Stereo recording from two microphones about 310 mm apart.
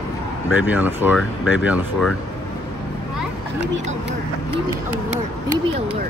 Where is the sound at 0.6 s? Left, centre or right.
Centre.